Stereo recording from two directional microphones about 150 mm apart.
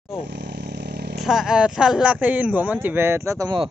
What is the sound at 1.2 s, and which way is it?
Speech, 5° right (ahead or behind).